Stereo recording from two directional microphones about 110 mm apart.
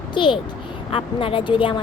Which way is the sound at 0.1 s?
45° left (ahead or behind).